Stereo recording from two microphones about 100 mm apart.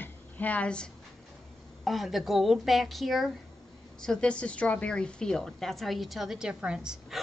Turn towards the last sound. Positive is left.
turn(degrees=-5)  # may be behind; listen again after turning